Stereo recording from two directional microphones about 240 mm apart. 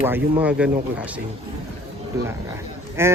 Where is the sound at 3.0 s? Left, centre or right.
Centre.